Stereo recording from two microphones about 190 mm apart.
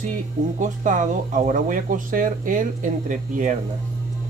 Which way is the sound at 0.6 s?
40° right (ahead or behind).